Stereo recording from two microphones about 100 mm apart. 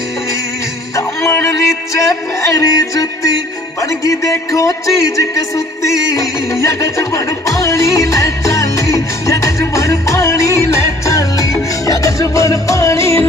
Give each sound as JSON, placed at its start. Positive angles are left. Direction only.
{"t": 0.9, "sound": "music", "side_deg": 30}
{"t": 2.5, "sound": "speech", "side_deg": 35}
{"t": 9.6, "sound": "music", "side_deg": 30}